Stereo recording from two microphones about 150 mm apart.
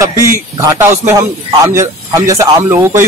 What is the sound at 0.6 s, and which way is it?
A man's voice, 15° right (ahead or behind).